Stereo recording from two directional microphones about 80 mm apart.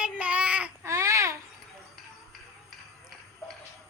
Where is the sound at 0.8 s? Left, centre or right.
Right.